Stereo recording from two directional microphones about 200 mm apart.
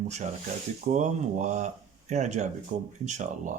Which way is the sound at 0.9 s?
35° right (ahead or behind).